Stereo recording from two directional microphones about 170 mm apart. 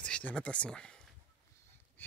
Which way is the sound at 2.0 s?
10° left (ahead or behind).